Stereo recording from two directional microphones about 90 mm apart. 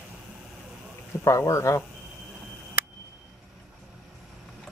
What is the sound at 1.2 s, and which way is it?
Speech, 35° left (ahead or behind).